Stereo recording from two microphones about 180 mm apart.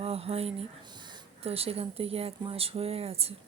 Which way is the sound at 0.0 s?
35° right (ahead or behind).